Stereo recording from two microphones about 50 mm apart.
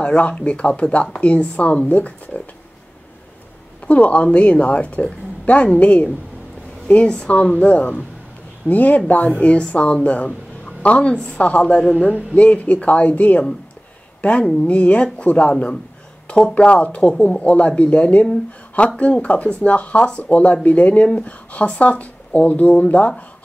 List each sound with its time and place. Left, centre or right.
0.0 s speech: left
3.8 s a woman's voice: left
16.5 s speech: left